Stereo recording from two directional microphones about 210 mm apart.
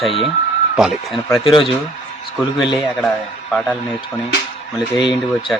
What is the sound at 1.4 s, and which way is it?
Speech, 25° left (ahead or behind).